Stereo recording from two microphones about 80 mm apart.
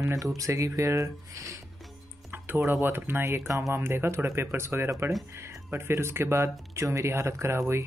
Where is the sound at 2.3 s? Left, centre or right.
Right.